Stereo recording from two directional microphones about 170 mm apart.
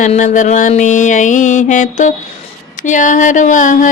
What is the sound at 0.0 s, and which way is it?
Music, 45° left (ahead or behind).